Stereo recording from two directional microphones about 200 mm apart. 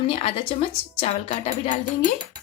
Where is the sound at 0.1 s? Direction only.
30° left (ahead or behind).